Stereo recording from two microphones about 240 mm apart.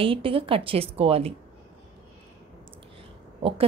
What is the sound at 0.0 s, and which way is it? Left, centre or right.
A woman's voice, right.